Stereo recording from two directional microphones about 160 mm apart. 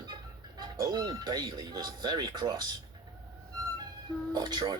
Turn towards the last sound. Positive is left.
turn(degrees=-25)  # may be behind; listen again after turning